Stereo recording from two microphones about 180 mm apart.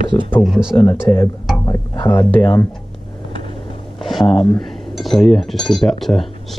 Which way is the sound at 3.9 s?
Centre (ahead or behind).